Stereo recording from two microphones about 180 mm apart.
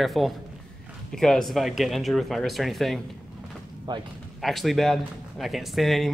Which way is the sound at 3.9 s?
25° right (ahead or behind).